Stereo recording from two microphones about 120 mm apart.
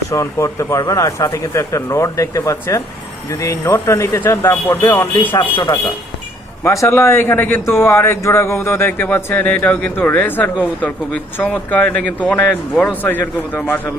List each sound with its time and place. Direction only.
0.1 s speech: 25° left (ahead or behind)
6.6 s a man's voice: 25° left (ahead or behind)